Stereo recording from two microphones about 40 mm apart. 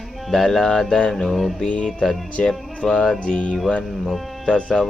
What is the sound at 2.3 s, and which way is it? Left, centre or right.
Speech, centre.